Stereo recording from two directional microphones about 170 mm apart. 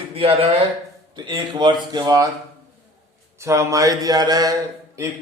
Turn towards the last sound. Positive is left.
turn(degrees=-15)  # may be behind; listen again after turning